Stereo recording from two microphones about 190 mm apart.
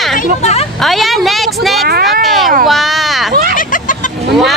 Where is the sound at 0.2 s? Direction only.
35° left (ahead or behind).